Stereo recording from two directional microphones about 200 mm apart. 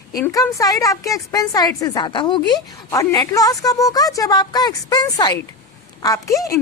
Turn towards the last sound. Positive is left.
turn(degrees=15)  # may be behind; listen again after turning